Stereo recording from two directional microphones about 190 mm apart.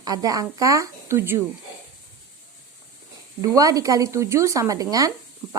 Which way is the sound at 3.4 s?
20° right (ahead or behind).